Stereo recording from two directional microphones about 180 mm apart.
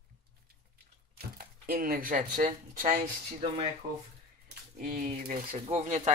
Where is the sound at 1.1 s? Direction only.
55° right (ahead or behind).